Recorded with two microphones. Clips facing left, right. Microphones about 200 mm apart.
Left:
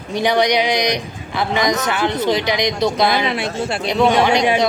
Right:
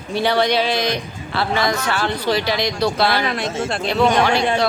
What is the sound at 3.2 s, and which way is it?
Speech, 5° left (ahead or behind).